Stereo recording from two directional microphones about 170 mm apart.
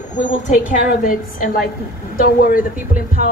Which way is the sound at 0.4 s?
50° left (ahead or behind).